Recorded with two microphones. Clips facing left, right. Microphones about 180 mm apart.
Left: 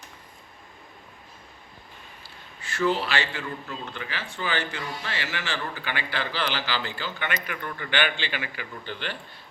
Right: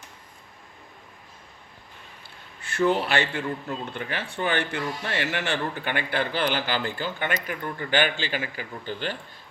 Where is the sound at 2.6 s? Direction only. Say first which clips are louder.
Right 2 dB; 55° right (ahead or behind).